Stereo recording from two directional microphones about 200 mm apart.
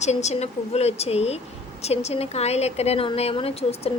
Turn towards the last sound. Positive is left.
turn(degrees=30)  # may be behind; listen again after turning